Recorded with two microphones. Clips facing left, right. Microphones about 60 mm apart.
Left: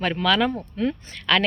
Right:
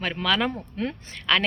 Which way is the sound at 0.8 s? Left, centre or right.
Right.